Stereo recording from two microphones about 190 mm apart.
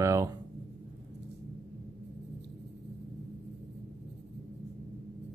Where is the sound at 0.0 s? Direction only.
15° right (ahead or behind).